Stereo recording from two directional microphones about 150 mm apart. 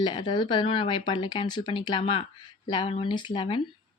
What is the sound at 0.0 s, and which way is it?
Speech, 30° left (ahead or behind).